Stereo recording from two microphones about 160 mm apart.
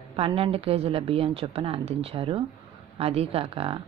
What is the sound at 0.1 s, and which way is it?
A woman's voice, 35° right (ahead or behind).